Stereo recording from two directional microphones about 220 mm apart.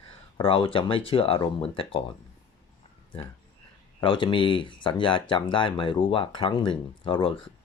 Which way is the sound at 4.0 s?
20° left (ahead or behind).